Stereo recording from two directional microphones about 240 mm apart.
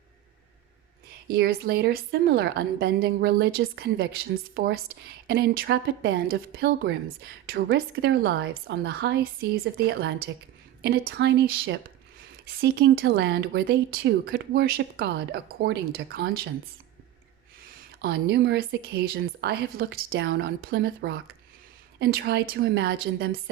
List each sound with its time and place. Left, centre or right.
1.3 s speech: right
12.5 s speech: right
17.7 s speech: right